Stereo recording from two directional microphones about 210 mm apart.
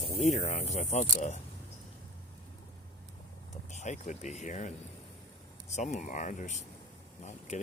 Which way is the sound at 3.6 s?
35° left (ahead or behind).